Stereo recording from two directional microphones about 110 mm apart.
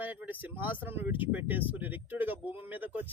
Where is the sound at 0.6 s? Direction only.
15° right (ahead or behind).